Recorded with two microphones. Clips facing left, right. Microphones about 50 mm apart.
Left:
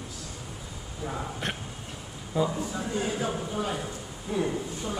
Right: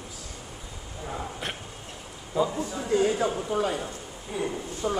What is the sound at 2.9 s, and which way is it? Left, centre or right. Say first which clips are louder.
Speech: right 8 dB; right.